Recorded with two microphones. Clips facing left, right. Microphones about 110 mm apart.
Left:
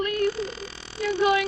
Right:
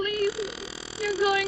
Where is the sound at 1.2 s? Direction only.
25° left (ahead or behind).